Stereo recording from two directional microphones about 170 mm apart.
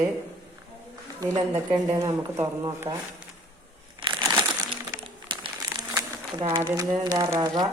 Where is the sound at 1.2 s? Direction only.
25° right (ahead or behind).